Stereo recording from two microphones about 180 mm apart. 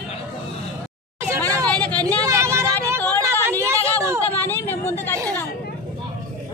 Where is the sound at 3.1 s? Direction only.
15° right (ahead or behind).